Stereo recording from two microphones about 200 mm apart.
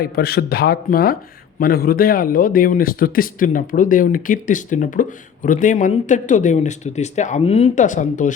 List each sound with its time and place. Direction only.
0.0 s a man's voice: 50° left (ahead or behind)